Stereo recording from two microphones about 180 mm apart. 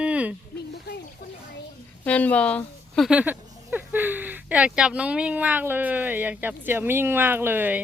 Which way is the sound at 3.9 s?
10° right (ahead or behind).